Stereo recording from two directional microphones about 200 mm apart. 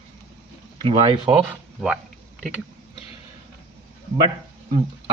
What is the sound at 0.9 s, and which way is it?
Speech, 30° right (ahead or behind).